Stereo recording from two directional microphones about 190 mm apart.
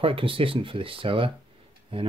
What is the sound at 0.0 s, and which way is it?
Speech, 30° right (ahead or behind).